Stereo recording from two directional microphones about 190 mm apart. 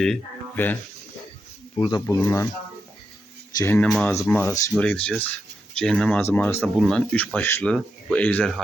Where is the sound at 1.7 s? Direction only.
30° left (ahead or behind).